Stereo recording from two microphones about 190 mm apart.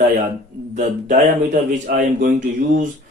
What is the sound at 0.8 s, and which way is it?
Speech, 40° right (ahead or behind).